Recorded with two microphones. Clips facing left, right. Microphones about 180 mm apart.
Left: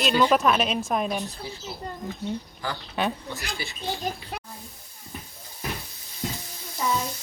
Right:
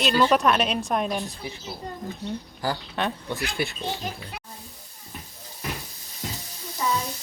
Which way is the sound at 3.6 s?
60° right (ahead or behind).